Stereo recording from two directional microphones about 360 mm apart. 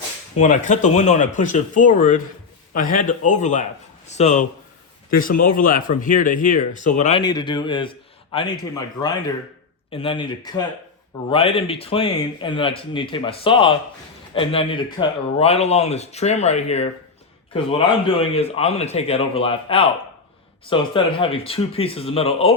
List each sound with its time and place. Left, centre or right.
0.3 s speech: left